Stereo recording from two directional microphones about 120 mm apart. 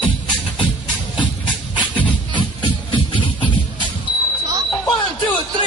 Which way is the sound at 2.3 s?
40° left (ahead or behind).